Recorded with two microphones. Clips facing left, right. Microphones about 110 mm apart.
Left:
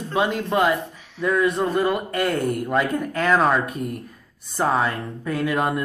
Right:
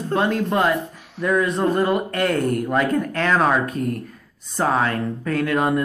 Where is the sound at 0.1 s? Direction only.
5° left (ahead or behind).